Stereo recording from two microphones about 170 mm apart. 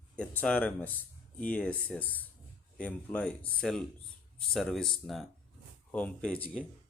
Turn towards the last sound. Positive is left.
turn(degrees=5)  # may be behind; listen again after turning